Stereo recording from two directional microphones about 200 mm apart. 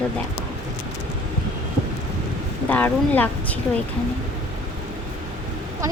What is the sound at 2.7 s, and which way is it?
Speech, 10° left (ahead or behind).